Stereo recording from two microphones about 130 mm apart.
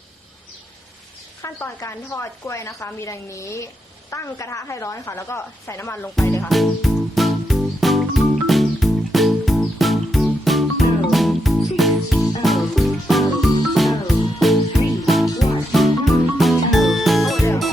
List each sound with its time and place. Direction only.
1.4 s a woman's voice: 20° left (ahead or behind)
6.5 s music: centre (ahead or behind)